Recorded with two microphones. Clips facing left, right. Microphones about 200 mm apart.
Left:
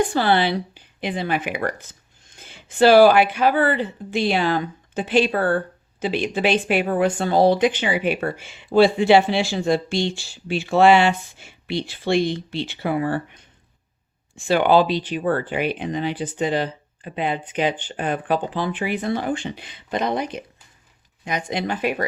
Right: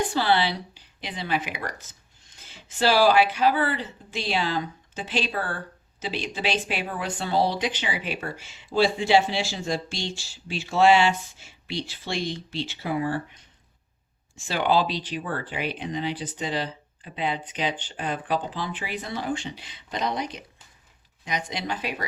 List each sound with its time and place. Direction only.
0.1 s speech: 55° left (ahead or behind)
14.3 s speech: 55° left (ahead or behind)